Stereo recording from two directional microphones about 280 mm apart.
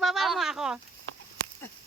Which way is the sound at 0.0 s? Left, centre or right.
Centre.